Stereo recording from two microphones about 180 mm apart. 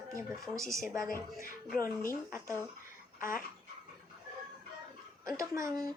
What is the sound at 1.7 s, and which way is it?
Speech, 50° left (ahead or behind).